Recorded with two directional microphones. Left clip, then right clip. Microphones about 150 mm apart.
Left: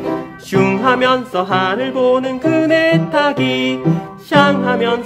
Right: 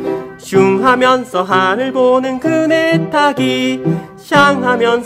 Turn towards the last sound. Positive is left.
turn(degrees=-30)  # may be behind; listen again after turning